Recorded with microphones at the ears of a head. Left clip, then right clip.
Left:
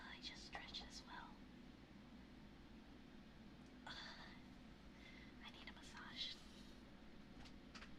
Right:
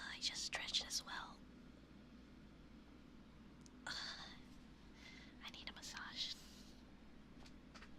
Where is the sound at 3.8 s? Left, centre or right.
Right.